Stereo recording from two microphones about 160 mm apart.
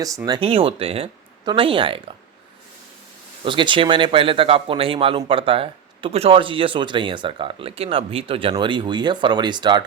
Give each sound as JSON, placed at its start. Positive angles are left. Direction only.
{"t": 0.3, "sound": "speech", "side_deg": -35}
{"t": 3.4, "sound": "speech", "side_deg": -30}